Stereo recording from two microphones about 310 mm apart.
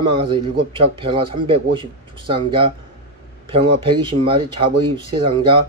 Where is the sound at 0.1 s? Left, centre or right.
Centre.